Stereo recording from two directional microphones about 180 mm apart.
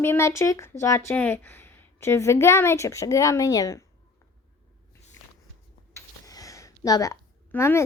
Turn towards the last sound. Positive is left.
turn(degrees=15)  # may be behind; listen again after turning